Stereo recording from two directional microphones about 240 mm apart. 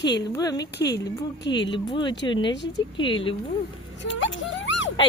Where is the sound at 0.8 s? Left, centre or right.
Left.